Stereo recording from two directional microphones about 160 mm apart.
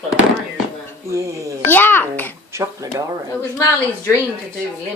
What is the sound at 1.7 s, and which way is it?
Babbling, 10° left (ahead or behind).